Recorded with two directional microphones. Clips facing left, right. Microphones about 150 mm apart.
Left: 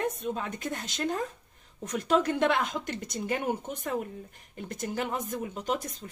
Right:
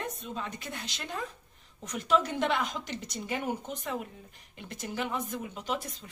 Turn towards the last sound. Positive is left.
turn(degrees=45)  # may be behind; listen again after turning